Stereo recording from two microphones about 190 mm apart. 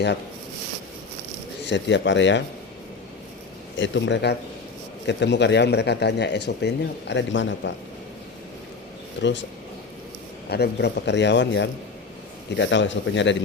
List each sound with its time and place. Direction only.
1.6 s a man's voice: 70° left (ahead or behind)
3.8 s a man's voice: 70° left (ahead or behind)
9.2 s a man's voice: 70° left (ahead or behind)
10.5 s a man's voice: 60° left (ahead or behind)